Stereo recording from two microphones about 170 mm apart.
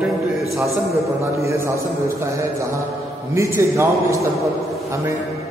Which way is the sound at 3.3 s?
15° right (ahead or behind).